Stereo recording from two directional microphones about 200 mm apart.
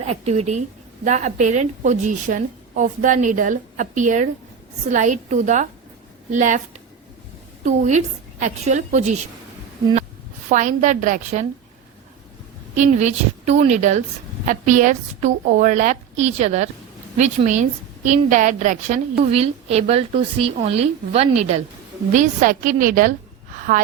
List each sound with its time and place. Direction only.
0.0 s a woman's voice: 35° right (ahead or behind)
7.6 s a woman's voice: 35° right (ahead or behind)
10.5 s a woman's voice: 40° right (ahead or behind)
12.7 s a woman's voice: 35° right (ahead or behind)
23.6 s gasp: 40° right (ahead or behind)